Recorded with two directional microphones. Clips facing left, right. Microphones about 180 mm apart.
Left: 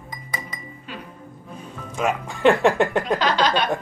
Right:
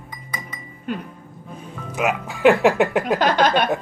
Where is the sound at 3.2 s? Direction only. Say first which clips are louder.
Right 5 dB; 55° right (ahead or behind).